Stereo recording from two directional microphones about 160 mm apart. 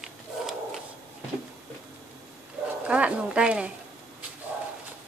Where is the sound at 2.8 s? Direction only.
5° right (ahead or behind).